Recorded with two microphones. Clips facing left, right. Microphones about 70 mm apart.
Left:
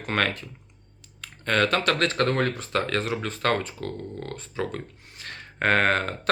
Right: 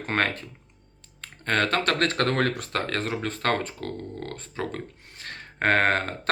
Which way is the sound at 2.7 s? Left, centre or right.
Right.